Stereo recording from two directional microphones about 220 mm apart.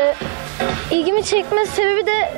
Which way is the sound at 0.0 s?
20° right (ahead or behind).